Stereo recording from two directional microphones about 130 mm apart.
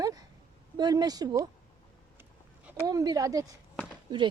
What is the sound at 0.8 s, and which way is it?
Speech, 30° right (ahead or behind).